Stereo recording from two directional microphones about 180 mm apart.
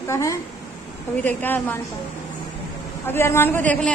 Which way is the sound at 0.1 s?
15° left (ahead or behind).